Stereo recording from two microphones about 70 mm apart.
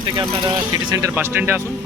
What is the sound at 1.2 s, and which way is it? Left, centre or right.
Speech, right.